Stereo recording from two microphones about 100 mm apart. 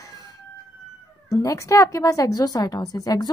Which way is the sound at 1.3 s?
30° left (ahead or behind).